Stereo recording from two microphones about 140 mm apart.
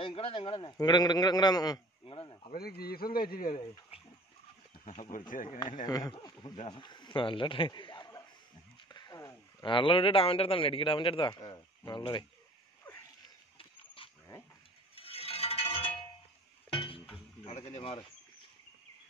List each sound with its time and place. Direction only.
0.0 s a man's voice: 40° left (ahead or behind)
2.1 s a man's voice: 40° left (ahead or behind)
2.5 s a man's voice: 90° left
3.9 s a sound: 45° left (ahead or behind)
5.3 s speech: 70° left (ahead or behind)
5.9 s speech: 25° left (ahead or behind)
6.1 s a man's voice: 35° left (ahead or behind)
12.9 s a sound: 10° left (ahead or behind)
13.6 s pig: 40° left (ahead or behind)
15.0 s a sound: 45° left (ahead or behind)
16.7 s music: 40° left (ahead or behind)
17.1 s a sound: 45° left (ahead or behind)
17.7 s a man's voice: 40° left (ahead or behind)